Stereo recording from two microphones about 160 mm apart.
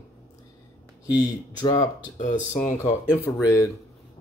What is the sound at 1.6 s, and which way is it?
Speech, 25° left (ahead or behind).